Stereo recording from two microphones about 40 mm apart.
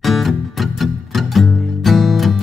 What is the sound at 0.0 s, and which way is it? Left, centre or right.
Music, centre.